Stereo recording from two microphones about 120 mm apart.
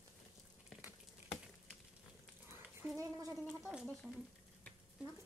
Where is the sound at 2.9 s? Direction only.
25° right (ahead or behind).